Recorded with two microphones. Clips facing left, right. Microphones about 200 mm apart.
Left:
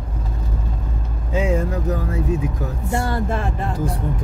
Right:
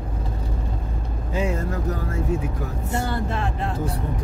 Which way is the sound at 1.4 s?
15° left (ahead or behind).